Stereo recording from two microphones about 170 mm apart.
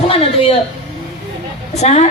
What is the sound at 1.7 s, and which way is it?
Speech, 40° left (ahead or behind).